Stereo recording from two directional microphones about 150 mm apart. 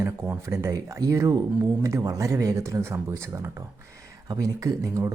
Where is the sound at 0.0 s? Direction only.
20° right (ahead or behind).